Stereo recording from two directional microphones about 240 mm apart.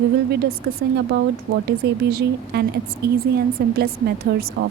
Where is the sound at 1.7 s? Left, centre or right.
Right.